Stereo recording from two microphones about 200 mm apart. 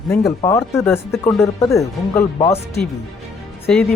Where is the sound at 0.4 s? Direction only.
15° left (ahead or behind).